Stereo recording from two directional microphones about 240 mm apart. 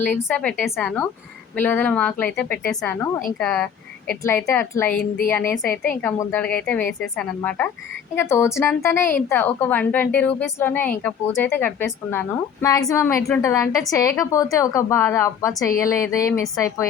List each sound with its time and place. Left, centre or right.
0.0 s speech: centre
4.9 s a woman's voice: left
5.3 s speech: centre